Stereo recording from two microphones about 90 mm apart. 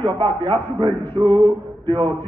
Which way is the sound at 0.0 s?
70° right (ahead or behind).